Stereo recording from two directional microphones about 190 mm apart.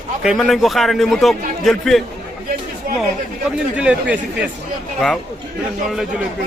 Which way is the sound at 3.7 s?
5° right (ahead or behind).